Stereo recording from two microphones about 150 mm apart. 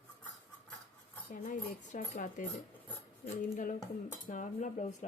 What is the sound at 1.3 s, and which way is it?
Speech, 65° left (ahead or behind).